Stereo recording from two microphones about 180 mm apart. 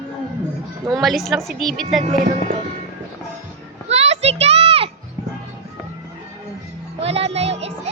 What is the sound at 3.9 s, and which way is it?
Children playing, 35° right (ahead or behind).